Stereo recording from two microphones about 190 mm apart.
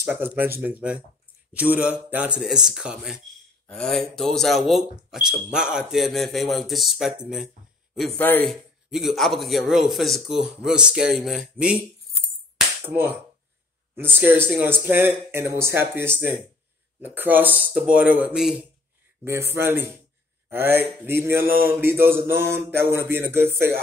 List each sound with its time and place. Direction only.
0.0 s mantra: 10° right (ahead or behind)
1.5 s speech: 5° right (ahead or behind)
8.2 s a man's voice: 10° left (ahead or behind)
12.5 s music: 10° right (ahead or behind)
13.9 s mantra: 10° right (ahead or behind)